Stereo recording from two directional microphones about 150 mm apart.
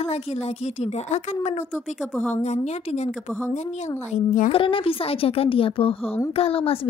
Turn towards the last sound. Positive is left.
turn(degrees=40)  # may be behind; listen again after turning